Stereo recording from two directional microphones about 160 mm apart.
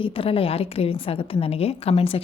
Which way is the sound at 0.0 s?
35° left (ahead or behind).